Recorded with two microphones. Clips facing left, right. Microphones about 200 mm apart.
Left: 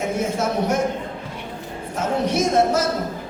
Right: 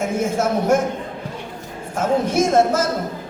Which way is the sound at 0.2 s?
50° right (ahead or behind).